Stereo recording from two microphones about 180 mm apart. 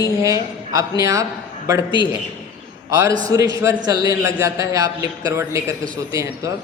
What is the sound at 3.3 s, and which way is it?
A woman's voice, 20° right (ahead or behind).